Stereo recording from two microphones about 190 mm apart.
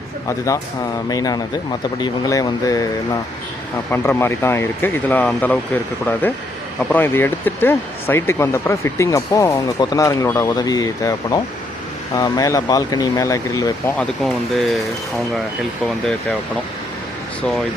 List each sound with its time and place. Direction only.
0.3 s speech: 15° left (ahead or behind)
6.9 s speech: 10° left (ahead or behind)
14.0 s speech: centre (ahead or behind)